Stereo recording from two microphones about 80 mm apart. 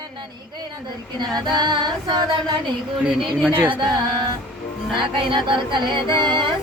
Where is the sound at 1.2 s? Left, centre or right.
Right.